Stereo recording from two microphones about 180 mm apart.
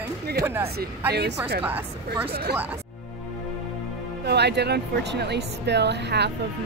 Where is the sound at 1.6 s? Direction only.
10° right (ahead or behind).